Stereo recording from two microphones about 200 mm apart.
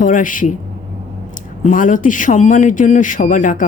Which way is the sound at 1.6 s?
40° left (ahead or behind).